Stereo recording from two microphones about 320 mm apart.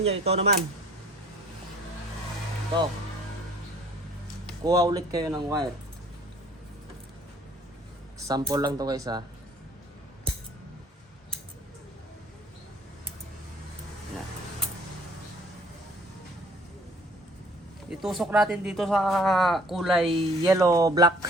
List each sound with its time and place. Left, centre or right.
0.0 s speech: centre
4.6 s speech: centre
8.3 s speech: centre
17.8 s speech: centre
20.1 s speech: centre